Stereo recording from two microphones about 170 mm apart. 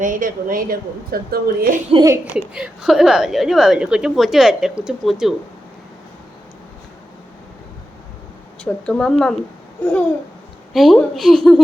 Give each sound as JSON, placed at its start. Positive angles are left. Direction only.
{"t": 0.0, "sound": "a woman's voice", "side_deg": -55}
{"t": 1.9, "sound": "speech", "side_deg": -25}
{"t": 2.5, "sound": "a woman's voice", "side_deg": -5}
{"t": 8.6, "sound": "a woman's voice", "side_deg": 5}
{"t": 10.8, "sound": "a woman's voice", "side_deg": 0}